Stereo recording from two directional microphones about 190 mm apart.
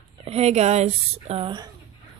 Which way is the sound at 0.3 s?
35° right (ahead or behind).